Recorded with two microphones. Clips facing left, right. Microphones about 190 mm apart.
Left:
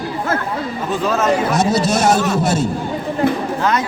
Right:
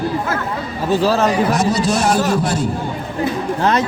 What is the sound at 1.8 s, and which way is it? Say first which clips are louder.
Speech: left 1 dB; 20° left (ahead or behind).